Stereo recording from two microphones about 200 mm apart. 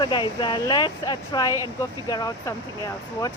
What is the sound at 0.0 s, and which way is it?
Speech, 20° left (ahead or behind).